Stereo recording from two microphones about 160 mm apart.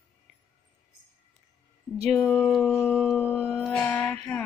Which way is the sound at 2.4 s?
5° left (ahead or behind).